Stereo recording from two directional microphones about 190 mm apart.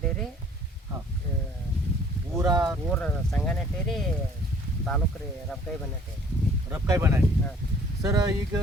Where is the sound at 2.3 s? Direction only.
20° right (ahead or behind).